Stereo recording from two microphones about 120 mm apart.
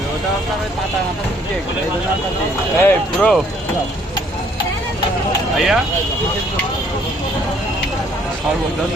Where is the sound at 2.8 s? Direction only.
15° left (ahead or behind).